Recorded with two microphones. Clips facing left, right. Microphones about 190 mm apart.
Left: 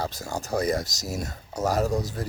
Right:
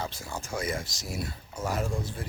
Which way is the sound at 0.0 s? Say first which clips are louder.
Left 5 dB; 40° left (ahead or behind).